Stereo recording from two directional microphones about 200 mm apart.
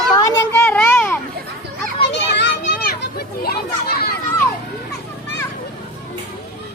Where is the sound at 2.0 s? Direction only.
60° left (ahead or behind).